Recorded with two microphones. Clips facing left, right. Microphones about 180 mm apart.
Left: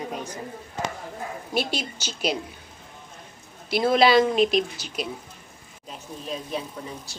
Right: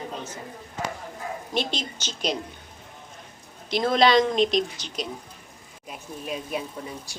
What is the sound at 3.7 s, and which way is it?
Speech, 5° left (ahead or behind).